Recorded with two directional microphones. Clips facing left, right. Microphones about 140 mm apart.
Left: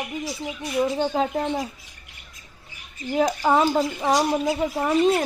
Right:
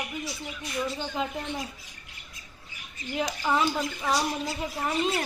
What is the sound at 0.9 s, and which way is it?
Speech, 45° left (ahead or behind).